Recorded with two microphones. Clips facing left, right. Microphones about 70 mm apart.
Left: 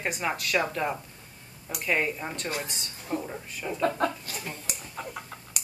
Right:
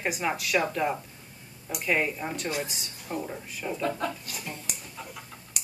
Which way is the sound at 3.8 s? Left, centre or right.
Left.